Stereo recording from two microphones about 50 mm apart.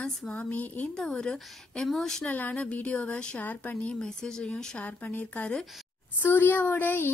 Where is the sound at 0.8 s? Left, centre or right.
Centre.